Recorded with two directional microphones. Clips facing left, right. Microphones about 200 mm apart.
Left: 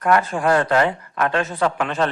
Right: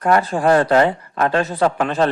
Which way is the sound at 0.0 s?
35° right (ahead or behind).